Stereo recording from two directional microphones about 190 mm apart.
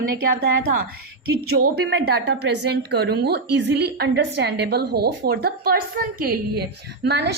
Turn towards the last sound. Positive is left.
turn(degrees=-60)  # may be behind; listen again after turning